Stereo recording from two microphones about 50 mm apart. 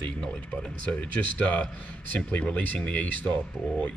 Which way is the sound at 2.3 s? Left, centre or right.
Left.